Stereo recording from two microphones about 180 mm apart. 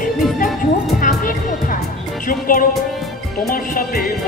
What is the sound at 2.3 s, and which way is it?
Speech, 50° left (ahead or behind).